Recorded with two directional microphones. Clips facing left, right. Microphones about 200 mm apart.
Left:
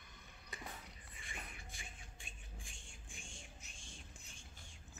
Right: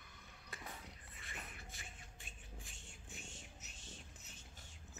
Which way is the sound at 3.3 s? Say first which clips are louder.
Right 1 dB; 5° right (ahead or behind).